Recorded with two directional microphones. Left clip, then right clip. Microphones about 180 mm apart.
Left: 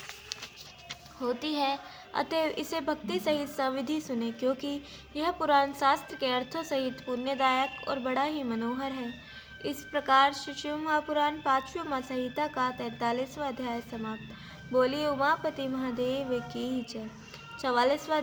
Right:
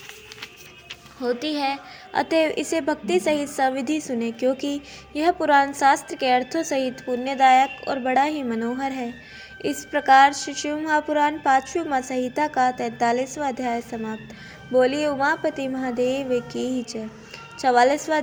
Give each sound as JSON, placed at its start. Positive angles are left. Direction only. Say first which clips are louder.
{"t": 1.2, "sound": "a woman's voice", "louder": "right 6 dB", "side_deg": -20}